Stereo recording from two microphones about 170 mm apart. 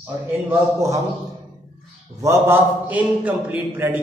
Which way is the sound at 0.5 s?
20° right (ahead or behind).